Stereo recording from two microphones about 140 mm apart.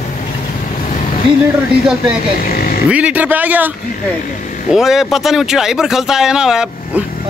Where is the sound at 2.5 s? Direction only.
90° left.